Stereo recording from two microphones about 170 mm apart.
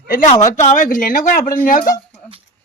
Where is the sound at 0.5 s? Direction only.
45° left (ahead or behind).